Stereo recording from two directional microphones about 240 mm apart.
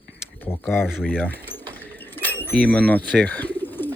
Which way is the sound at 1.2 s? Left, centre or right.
Centre.